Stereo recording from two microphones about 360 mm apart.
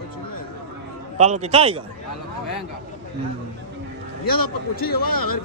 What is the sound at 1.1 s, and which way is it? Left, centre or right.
Speech, centre.